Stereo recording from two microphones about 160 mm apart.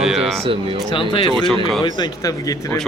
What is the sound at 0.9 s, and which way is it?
Speech, 30° left (ahead or behind).